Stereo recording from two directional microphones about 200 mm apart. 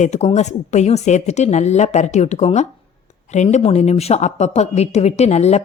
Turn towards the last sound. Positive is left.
turn(degrees=35)  # may be behind; listen again after turning